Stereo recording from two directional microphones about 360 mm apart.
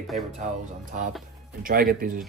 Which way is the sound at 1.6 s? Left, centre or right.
Right.